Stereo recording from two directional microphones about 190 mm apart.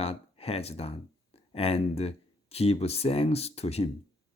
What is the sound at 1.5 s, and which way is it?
Speech, 30° left (ahead or behind).